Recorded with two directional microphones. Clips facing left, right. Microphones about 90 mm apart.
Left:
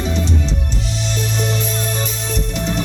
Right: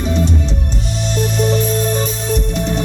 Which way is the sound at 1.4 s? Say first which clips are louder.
Right 8 dB; 45° right (ahead or behind).